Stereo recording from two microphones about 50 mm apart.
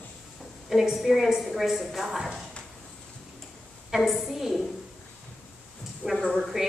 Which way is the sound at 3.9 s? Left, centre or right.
Centre.